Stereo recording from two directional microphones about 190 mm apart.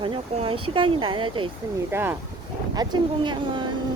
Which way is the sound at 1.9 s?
10° right (ahead or behind).